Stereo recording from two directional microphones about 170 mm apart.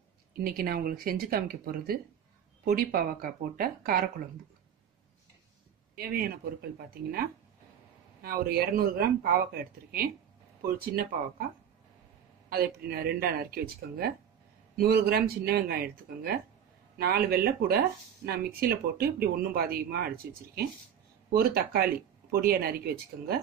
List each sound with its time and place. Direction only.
0.3 s speech: 60° right (ahead or behind)
5.9 s speech: 65° right (ahead or behind)
12.4 s speech: 65° right (ahead or behind)